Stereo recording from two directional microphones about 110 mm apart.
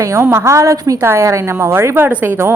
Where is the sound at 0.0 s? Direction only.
25° right (ahead or behind).